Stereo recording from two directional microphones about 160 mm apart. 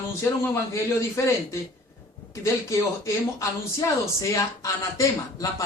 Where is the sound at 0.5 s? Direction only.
20° left (ahead or behind).